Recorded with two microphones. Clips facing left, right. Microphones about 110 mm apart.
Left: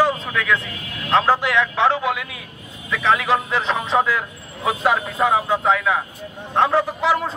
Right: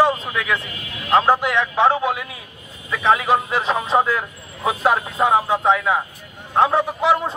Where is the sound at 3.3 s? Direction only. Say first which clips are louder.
Right 1 dB; 5° right (ahead or behind).